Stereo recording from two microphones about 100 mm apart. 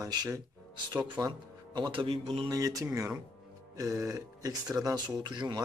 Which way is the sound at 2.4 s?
35° right (ahead or behind).